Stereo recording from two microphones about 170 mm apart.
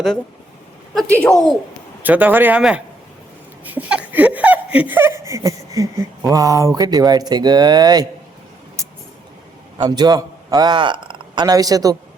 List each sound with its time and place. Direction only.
1.1 s speech: 10° left (ahead or behind)
2.0 s speech: 10° right (ahead or behind)
9.7 s a man's voice: 25° right (ahead or behind)